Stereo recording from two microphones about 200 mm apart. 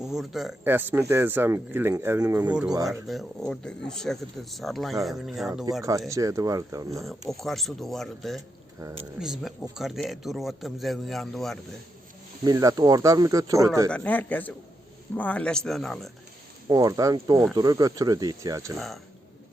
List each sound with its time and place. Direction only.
0.0 s speech: centre (ahead or behind)
2.7 s speech: 15° right (ahead or behind)
3.1 s speech: centre (ahead or behind)
6.1 s speech: 15° right (ahead or behind)
7.0 s speech: centre (ahead or behind)
12.5 s speech: 20° right (ahead or behind)
13.9 s a man's voice: 5° left (ahead or behind)
16.6 s speech: 15° right (ahead or behind)